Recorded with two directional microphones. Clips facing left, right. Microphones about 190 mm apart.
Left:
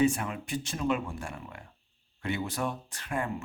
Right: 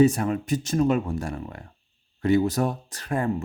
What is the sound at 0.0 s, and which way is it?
Speech, 40° right (ahead or behind).